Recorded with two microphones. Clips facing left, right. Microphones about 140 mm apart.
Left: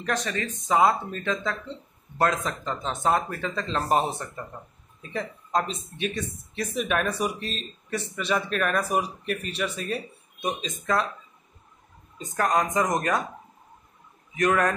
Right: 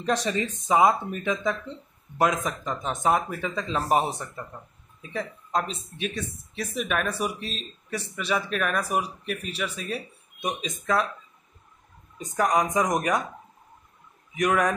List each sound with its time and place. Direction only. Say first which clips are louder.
0.0 s speech: right 3 dB; 20° right (ahead or behind)
12.4 s speech: right 1 dB; 10° right (ahead or behind)
14.3 s speech: even; 10° right (ahead or behind)